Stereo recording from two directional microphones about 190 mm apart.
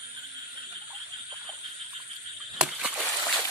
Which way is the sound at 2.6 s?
5° right (ahead or behind).